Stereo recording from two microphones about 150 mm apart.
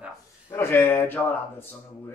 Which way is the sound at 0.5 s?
15° left (ahead or behind).